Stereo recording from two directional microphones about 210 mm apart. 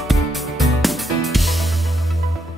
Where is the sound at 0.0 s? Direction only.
Centre (ahead or behind).